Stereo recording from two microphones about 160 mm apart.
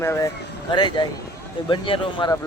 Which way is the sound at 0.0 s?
15° left (ahead or behind).